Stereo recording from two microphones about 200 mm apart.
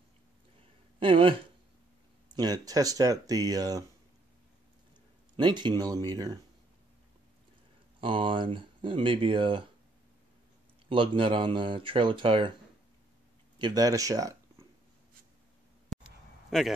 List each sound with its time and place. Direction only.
0.9 s speech: 25° right (ahead or behind)
5.3 s speech: 25° right (ahead or behind)
8.0 s speech: 25° right (ahead or behind)
10.9 s speech: 25° right (ahead or behind)
13.6 s speech: 20° right (ahead or behind)
15.9 s a sound: centre (ahead or behind)